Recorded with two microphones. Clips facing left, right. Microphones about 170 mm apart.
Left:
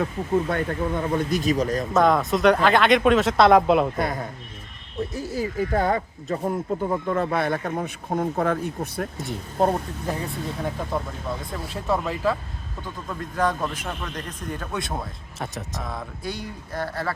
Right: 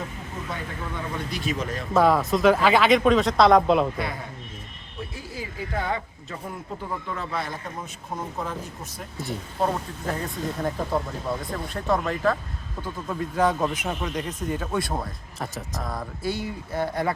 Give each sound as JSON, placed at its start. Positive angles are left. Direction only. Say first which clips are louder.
{"t": 0.5, "sound": "speech", "louder": "left 8 dB", "side_deg": 45}
{"t": 1.9, "sound": "speech", "louder": "right 1 dB", "side_deg": -5}
{"t": 3.9, "sound": "speech", "louder": "left 5 dB", "side_deg": 45}
{"t": 9.6, "sound": "speech", "louder": "left 4 dB", "side_deg": 45}
{"t": 10.1, "sound": "speech", "louder": "even", "side_deg": 5}
{"t": 13.1, "sound": "a man's voice", "louder": "right 2 dB", "side_deg": -5}